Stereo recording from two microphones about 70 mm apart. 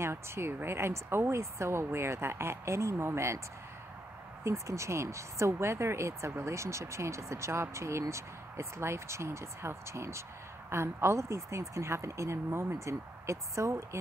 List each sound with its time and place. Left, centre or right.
0.0 s speech: right
4.5 s speech: right